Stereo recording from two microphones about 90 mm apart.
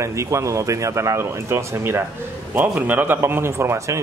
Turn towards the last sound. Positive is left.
turn(degrees=-35)  # may be behind; listen again after turning